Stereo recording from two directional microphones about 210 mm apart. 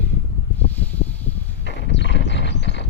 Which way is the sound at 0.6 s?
10° left (ahead or behind).